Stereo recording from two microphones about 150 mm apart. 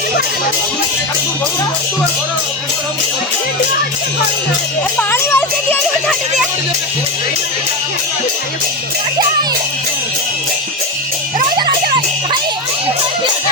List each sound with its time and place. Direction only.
4.9 s music: 15° left (ahead or behind)
11.3 s music: 30° right (ahead or behind)